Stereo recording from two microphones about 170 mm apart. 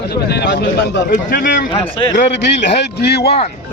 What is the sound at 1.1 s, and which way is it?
Speech, 55° left (ahead or behind).